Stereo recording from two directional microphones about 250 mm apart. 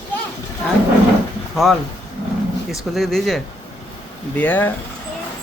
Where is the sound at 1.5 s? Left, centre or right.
Centre.